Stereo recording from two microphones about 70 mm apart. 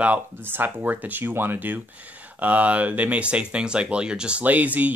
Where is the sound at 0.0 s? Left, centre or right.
Right.